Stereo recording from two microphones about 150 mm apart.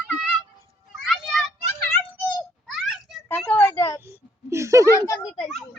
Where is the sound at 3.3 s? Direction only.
10° left (ahead or behind).